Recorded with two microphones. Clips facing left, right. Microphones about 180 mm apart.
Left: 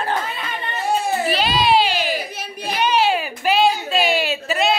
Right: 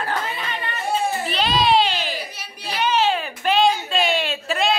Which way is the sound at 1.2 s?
5° left (ahead or behind).